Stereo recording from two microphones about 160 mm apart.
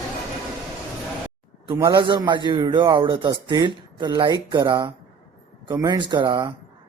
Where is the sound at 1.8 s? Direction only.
25° right (ahead or behind).